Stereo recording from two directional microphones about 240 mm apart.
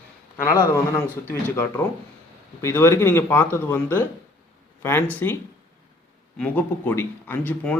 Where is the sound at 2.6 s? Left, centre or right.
Centre.